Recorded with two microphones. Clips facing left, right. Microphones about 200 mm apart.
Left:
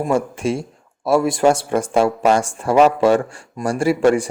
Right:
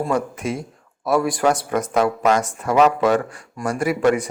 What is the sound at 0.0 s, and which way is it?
A man's voice, 30° left (ahead or behind).